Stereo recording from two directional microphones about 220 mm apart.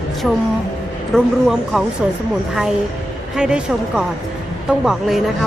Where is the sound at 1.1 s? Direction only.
Centre (ahead or behind).